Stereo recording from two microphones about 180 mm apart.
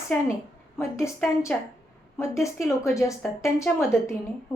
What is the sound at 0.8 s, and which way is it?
Speech, 15° left (ahead or behind).